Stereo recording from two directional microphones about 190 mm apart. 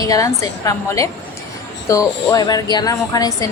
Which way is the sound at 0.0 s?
20° left (ahead or behind).